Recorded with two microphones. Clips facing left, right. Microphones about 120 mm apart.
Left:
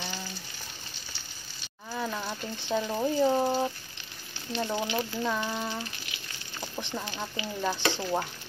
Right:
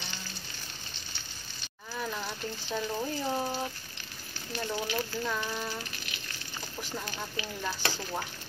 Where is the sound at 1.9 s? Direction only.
15° left (ahead or behind).